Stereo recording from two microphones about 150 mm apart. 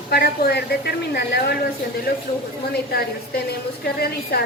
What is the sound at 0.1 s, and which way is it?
A woman's voice, 90° left.